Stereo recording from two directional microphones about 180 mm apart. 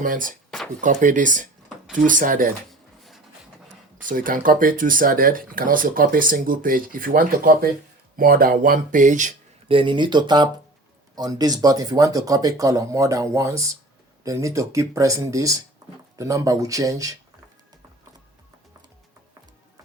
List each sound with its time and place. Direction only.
0.0 s speech: 50° right (ahead or behind)
4.0 s speech: 50° right (ahead or behind)
9.6 s speech: 30° right (ahead or behind)